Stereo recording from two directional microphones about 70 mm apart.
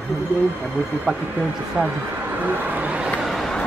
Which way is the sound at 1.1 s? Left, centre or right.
Centre.